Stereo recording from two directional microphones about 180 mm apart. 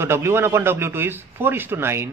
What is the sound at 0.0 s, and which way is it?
A man's voice, 15° right (ahead or behind).